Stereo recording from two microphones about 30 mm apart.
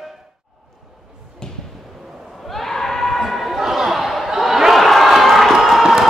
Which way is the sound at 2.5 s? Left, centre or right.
Centre.